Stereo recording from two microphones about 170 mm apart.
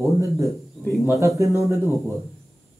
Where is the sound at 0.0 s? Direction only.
20° right (ahead or behind).